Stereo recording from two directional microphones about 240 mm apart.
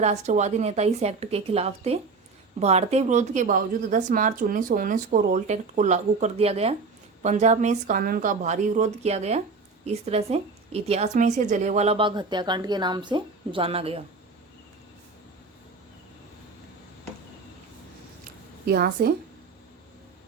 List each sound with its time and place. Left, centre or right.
0.0 s a woman's voice: right
18.6 s speech: right